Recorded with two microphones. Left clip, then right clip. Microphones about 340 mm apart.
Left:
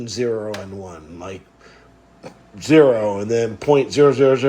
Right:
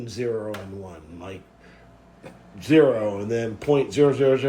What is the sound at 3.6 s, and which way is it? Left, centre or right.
Speech, left.